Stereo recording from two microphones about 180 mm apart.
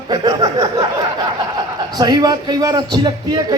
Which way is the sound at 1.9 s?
20° right (ahead or behind).